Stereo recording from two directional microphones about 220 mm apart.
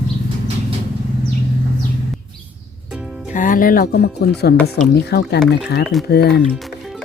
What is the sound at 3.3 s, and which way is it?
Speech, 35° left (ahead or behind).